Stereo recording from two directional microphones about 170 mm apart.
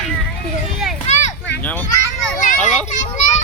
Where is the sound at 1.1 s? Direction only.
40° left (ahead or behind).